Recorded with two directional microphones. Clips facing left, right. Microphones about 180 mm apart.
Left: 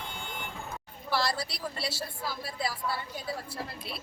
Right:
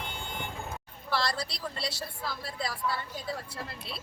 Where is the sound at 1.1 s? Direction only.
5° left (ahead or behind).